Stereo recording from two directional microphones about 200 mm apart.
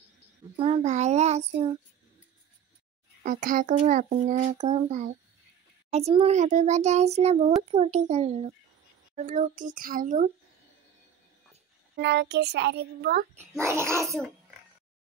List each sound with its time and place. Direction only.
0.6 s a child's voice: 30° right (ahead or behind)
3.3 s a child's voice: 40° right (ahead or behind)
12.0 s a child's voice: 60° right (ahead or behind)
13.6 s a child's voice: 15° right (ahead or behind)